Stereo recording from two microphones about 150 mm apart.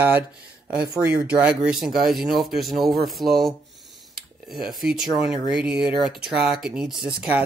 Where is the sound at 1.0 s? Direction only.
10° right (ahead or behind).